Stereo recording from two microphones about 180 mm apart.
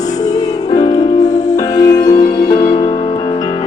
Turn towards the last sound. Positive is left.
turn(degrees=25)  # may be behind; listen again after turning